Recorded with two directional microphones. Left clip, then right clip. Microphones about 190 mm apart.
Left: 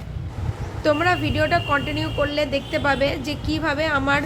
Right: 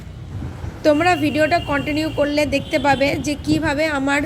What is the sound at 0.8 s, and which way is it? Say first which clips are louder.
A woman's voice: right 4 dB; 15° right (ahead or behind).